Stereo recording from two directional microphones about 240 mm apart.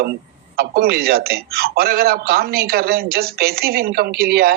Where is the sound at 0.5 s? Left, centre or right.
Right.